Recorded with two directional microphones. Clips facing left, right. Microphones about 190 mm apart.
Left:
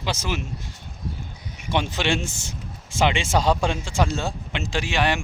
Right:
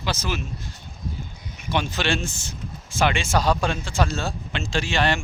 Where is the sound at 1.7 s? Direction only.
20° left (ahead or behind).